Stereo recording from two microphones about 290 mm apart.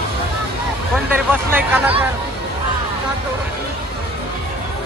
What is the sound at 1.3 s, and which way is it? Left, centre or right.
Speech, centre.